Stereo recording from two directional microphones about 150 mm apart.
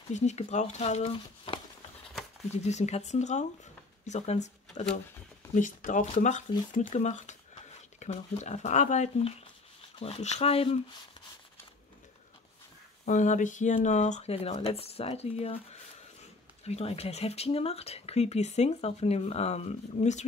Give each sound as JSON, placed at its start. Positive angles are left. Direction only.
{"t": 0.1, "sound": "speech", "side_deg": 50}
{"t": 2.5, "sound": "speech", "side_deg": 45}
{"t": 9.9, "sound": "speech", "side_deg": 40}
{"t": 13.0, "sound": "speech", "side_deg": 55}
{"t": 16.6, "sound": "speech", "side_deg": 45}